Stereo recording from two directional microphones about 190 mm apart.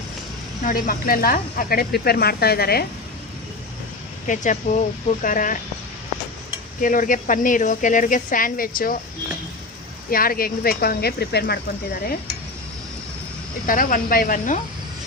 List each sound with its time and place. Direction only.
0.6 s speech: 50° left (ahead or behind)
4.3 s speech: 40° left (ahead or behind)
6.8 s speech: 45° left (ahead or behind)
10.1 s speech: 50° left (ahead or behind)
13.7 s speech: 45° left (ahead or behind)